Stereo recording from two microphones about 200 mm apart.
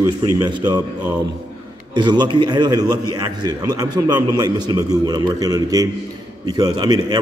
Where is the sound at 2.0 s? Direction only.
25° right (ahead or behind).